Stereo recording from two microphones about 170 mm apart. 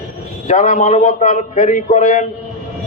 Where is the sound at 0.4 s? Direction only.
45° left (ahead or behind).